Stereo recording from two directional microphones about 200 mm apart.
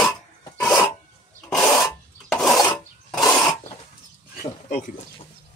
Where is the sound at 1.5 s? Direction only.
15° left (ahead or behind).